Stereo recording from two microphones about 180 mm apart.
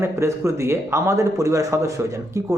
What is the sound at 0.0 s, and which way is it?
A man's voice, 15° right (ahead or behind).